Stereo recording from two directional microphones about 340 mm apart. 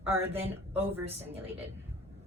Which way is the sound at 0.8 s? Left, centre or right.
Centre.